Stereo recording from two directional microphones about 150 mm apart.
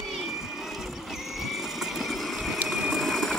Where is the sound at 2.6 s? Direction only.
5° right (ahead or behind).